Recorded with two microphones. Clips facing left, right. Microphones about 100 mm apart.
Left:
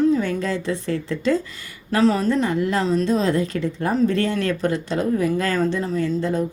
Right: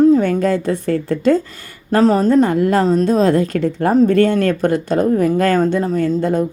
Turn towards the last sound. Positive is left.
turn(degrees=-55)  # may be behind; listen again after turning